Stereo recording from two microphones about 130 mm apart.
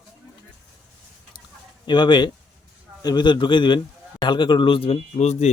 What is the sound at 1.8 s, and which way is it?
A man's voice, 35° left (ahead or behind).